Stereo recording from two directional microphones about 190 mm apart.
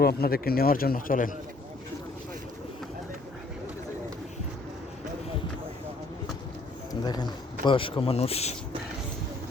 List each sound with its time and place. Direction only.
0.0 s speech: 55° left (ahead or behind)
7.0 s speech: 20° left (ahead or behind)